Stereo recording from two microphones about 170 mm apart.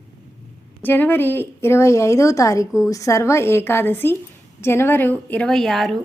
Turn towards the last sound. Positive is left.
turn(degrees=0)  # may be behind; listen again after turning